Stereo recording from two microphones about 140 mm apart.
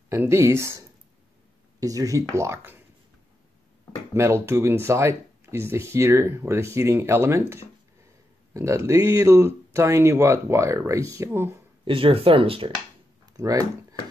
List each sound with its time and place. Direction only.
0.1 s speech: 20° right (ahead or behind)
4.1 s speech: 20° right (ahead or behind)
11.8 s speech: 40° right (ahead or behind)
13.2 s a sound: 25° right (ahead or behind)